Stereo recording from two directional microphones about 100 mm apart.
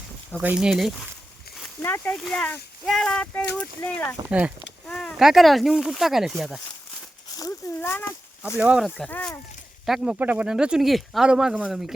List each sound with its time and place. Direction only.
0.4 s speech: 10° right (ahead or behind)
1.8 s speech: 15° left (ahead or behind)
4.3 s speech: 15° right (ahead or behind)
4.9 s speech: 5° left (ahead or behind)
7.8 s speech: 20° left (ahead or behind)
8.5 s speech: 15° right (ahead or behind)
9.0 s speech: 20° left (ahead or behind)
9.8 s speech: 5° right (ahead or behind)